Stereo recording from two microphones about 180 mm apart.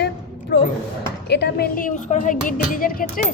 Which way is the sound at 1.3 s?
65° left (ahead or behind).